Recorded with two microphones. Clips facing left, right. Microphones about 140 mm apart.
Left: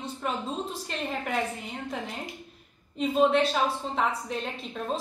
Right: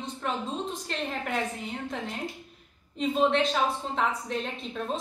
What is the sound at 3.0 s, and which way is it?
A woman's voice, 5° left (ahead or behind).